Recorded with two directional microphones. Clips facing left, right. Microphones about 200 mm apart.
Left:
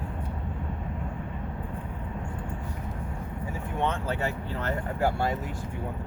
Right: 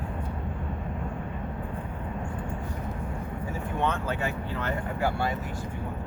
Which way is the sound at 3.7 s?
25° left (ahead or behind).